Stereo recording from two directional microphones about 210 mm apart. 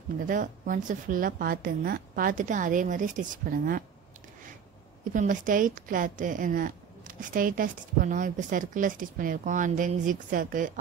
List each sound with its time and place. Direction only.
0.3 s a woman's voice: 40° right (ahead or behind)
5.1 s a woman's voice: 40° right (ahead or behind)